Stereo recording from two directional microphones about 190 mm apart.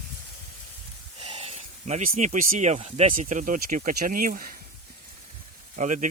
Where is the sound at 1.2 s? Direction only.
30° right (ahead or behind); by 4.5 s 45° right (ahead or behind).